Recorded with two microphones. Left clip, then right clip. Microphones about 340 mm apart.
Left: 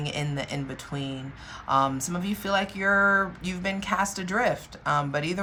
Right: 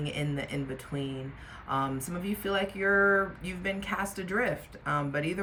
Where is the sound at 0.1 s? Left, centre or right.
Centre.